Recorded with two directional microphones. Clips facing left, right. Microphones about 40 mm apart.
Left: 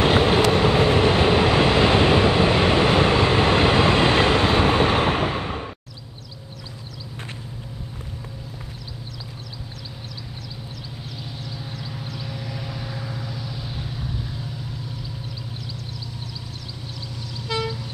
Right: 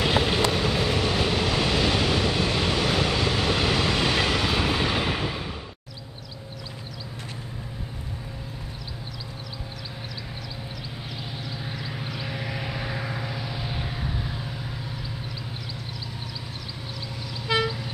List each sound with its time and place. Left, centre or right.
0.0 s vehicle: left
11.9 s vehicle: right
17.5 s vehicle: centre